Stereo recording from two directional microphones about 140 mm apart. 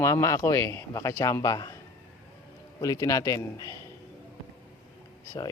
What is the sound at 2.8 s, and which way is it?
Speech, 25° left (ahead or behind).